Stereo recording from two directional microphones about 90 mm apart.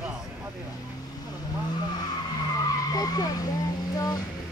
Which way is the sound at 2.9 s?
45° left (ahead or behind).